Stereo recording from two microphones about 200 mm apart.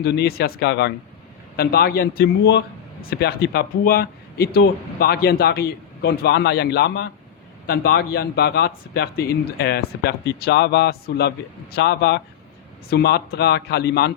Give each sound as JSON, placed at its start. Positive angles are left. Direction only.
{"t": 0.0, "sound": "a man's voice", "side_deg": 50}